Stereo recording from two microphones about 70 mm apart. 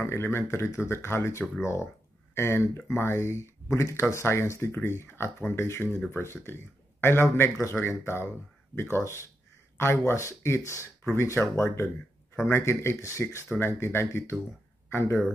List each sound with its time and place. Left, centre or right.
0.0 s speech: left